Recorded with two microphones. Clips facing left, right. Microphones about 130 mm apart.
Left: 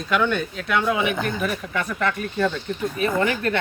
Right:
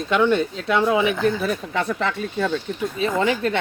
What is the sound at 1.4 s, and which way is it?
Speech, 30° right (ahead or behind).